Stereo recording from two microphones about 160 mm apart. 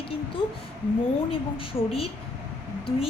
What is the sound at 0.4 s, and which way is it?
A woman's voice, 35° left (ahead or behind).